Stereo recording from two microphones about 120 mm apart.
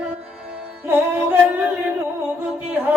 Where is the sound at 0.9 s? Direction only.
15° right (ahead or behind).